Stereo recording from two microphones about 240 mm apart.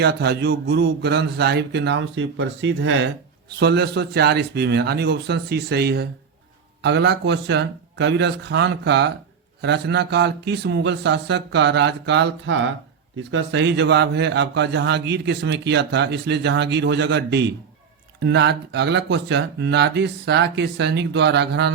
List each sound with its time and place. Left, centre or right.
0.0 s a man's voice: right